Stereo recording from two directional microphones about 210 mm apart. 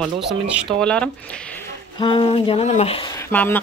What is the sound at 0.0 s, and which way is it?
Speech, centre (ahead or behind).